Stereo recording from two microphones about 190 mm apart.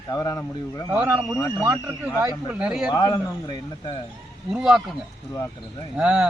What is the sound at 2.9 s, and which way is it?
Speech, 20° left (ahead or behind).